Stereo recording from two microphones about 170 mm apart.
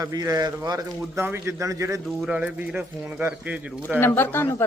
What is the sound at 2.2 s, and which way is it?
Speech, 5° right (ahead or behind).